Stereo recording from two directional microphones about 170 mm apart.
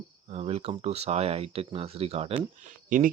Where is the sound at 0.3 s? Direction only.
35° right (ahead or behind).